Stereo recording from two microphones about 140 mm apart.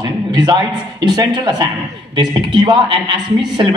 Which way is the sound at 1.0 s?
30° right (ahead or behind).